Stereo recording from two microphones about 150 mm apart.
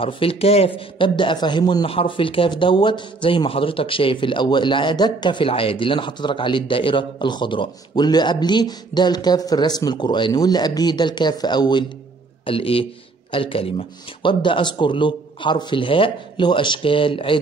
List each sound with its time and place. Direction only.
0.0 s a man's voice: 40° left (ahead or behind)